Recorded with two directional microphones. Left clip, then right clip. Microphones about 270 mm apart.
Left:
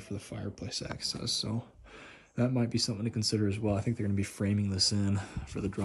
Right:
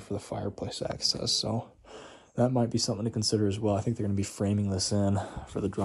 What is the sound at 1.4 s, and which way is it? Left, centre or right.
Speech, left.